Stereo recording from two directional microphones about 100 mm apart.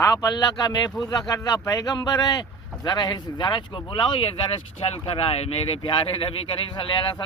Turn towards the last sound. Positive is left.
turn(degrees=55)  # may be behind; listen again after turning